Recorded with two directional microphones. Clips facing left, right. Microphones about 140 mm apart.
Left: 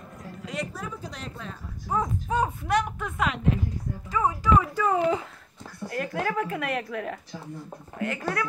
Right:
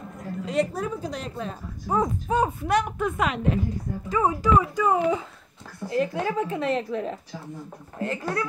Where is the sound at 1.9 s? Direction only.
30° right (ahead or behind).